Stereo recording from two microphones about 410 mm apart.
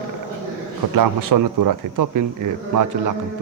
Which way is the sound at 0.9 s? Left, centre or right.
Right.